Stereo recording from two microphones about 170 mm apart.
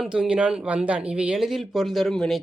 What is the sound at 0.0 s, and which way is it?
A woman's voice, 5° right (ahead or behind).